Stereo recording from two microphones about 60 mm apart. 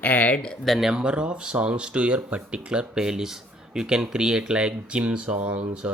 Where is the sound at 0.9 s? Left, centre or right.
Centre.